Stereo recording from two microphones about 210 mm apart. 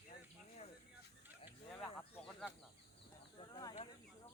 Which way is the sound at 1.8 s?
Centre (ahead or behind).